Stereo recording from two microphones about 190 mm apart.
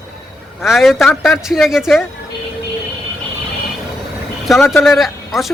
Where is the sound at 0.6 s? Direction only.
Centre (ahead or behind).